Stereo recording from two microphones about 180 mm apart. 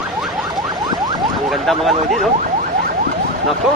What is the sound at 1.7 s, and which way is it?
Speech, centre (ahead or behind).